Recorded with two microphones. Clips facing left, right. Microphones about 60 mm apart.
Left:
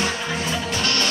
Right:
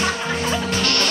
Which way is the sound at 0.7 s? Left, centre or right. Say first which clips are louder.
Right 2 dB; right.